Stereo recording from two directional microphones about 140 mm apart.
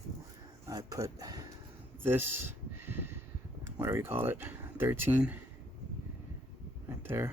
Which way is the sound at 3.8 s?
20° right (ahead or behind).